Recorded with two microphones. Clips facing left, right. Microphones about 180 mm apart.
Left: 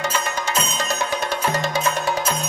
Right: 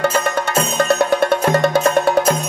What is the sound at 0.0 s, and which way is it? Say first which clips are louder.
Music: right 7 dB; 55° right (ahead or behind).